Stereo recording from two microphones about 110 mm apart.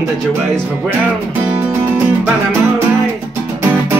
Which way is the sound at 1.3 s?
20° right (ahead or behind).